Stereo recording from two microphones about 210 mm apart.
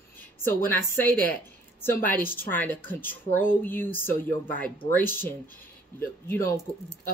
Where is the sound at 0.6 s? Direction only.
10° left (ahead or behind).